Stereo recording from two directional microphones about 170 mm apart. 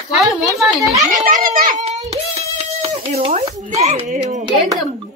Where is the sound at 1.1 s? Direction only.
50° right (ahead or behind).